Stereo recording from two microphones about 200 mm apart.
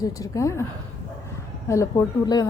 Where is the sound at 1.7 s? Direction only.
15° left (ahead or behind).